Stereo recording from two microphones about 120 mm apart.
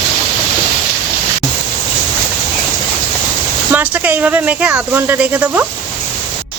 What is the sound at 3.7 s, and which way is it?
Speech, 15° right (ahead or behind).